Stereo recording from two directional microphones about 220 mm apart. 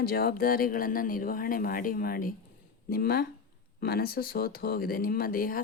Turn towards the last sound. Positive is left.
turn(degrees=40)  # may be behind; listen again after turning